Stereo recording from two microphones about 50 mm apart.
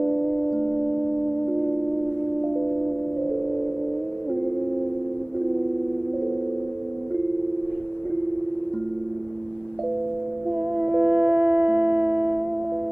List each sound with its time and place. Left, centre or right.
0.5 s singing bowl: centre
10.5 s music: right